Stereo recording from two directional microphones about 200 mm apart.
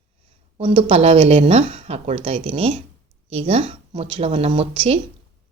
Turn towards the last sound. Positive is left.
turn(degrees=-30)  # may be behind; listen again after turning